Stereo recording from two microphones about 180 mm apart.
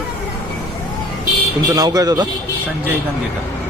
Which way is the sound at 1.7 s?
20° right (ahead or behind).